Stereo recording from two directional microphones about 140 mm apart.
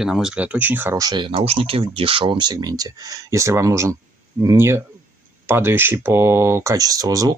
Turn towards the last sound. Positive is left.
turn(degrees=-25)  # may be behind; listen again after turning